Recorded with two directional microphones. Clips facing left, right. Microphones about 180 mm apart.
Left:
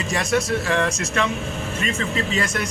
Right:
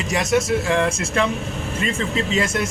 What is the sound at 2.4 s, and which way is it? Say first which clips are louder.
Speech: right 3 dB; 25° right (ahead or behind).